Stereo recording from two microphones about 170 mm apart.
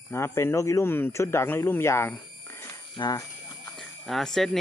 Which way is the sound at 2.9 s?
25° left (ahead or behind).